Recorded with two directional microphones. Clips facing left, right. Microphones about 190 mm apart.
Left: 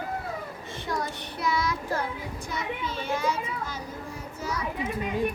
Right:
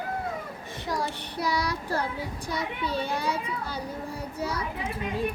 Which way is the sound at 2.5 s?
35° right (ahead or behind).